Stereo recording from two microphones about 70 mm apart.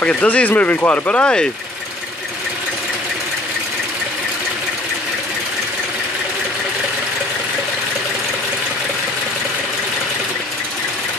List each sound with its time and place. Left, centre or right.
0.0 s speech: centre